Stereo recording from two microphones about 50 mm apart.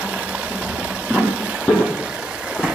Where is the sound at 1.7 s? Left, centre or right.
Left.